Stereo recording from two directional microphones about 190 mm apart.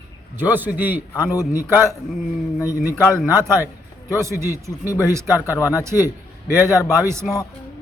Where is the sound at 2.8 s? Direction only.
10° right (ahead or behind).